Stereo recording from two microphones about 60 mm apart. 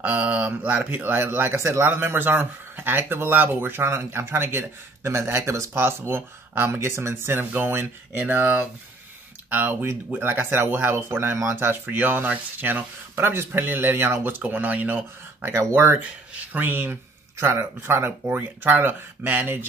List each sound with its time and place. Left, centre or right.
0.0 s speech: right
14.4 s speech: right
15.7 s speech: right
16.3 s speech: right